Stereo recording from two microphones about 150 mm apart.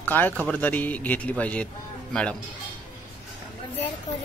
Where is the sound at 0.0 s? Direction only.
10° left (ahead or behind).